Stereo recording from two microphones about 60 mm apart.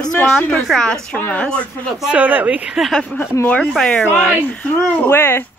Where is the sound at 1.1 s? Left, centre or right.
Left.